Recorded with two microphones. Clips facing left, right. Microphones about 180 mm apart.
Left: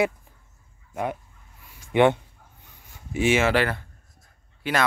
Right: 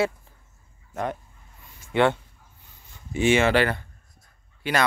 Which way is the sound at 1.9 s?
15° left (ahead or behind).